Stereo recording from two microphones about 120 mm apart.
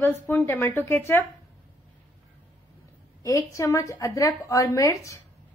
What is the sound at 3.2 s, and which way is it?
A woman's voice, 25° left (ahead or behind).